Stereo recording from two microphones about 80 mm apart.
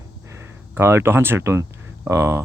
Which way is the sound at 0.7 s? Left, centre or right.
Right.